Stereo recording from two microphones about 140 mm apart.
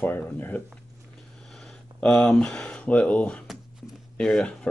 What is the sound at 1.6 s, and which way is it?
Speech, 5° left (ahead or behind).